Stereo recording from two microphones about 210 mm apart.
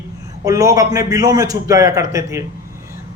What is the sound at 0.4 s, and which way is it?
A man's voice, 15° right (ahead or behind).